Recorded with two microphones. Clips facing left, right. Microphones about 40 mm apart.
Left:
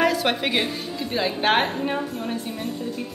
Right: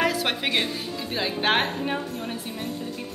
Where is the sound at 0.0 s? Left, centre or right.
Centre.